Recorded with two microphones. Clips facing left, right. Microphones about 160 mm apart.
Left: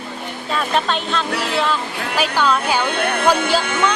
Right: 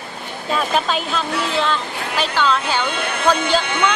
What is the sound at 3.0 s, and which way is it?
Speech, 55° left (ahead or behind).